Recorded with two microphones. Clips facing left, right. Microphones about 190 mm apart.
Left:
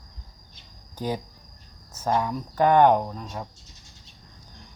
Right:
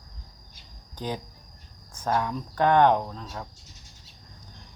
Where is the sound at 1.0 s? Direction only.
10° left (ahead or behind).